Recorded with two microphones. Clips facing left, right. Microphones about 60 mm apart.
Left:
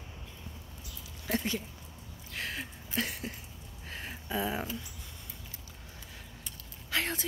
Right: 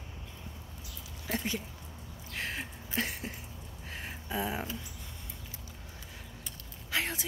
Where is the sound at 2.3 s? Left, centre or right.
Right.